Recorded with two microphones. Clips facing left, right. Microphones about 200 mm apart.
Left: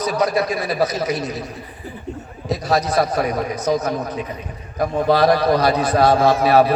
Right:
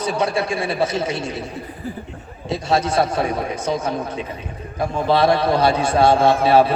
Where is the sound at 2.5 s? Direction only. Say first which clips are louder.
Even; 25° right (ahead or behind).